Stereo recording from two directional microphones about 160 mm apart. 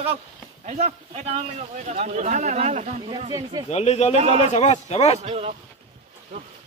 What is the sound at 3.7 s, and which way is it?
A man's voice, 45° left (ahead or behind).